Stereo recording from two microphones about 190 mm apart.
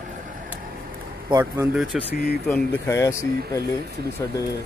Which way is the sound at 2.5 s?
15° left (ahead or behind).